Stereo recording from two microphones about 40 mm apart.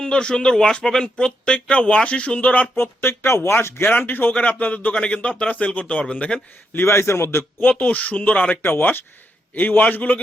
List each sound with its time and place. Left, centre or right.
0.0 s speech: left
1.5 s speech: left
2.7 s speech: left
3.9 s speech: left
4.3 s speech: left
6.7 s speech: left
7.6 s speech: left
8.6 s a man's voice: left